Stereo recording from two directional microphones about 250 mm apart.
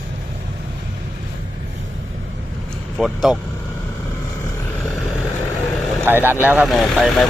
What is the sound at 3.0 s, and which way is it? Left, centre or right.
Speech, centre.